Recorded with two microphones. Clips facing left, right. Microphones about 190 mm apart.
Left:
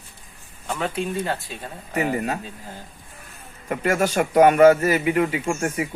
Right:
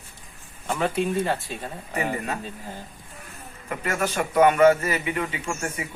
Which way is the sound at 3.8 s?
40° left (ahead or behind).